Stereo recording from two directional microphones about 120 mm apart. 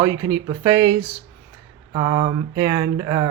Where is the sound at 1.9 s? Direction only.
50° right (ahead or behind).